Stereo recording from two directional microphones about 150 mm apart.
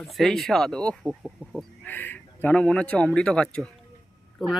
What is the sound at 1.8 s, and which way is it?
Speech, 15° left (ahead or behind).